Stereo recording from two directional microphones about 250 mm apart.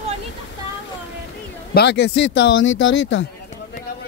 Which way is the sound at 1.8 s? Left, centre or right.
Left.